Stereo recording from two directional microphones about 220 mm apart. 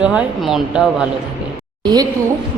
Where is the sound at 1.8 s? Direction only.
20° right (ahead or behind).